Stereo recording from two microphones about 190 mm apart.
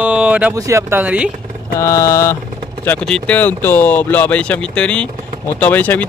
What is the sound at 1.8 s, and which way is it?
Speech, 15° left (ahead or behind).